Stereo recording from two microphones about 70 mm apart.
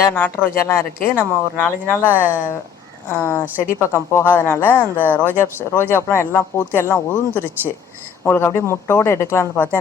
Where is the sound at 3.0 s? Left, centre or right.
Left.